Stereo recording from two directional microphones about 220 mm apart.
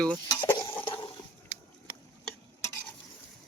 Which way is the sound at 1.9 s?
45° left (ahead or behind).